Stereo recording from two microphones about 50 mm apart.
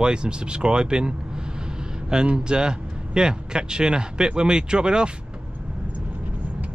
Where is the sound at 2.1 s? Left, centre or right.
Centre.